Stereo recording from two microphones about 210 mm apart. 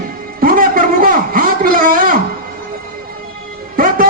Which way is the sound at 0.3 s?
45° right (ahead or behind).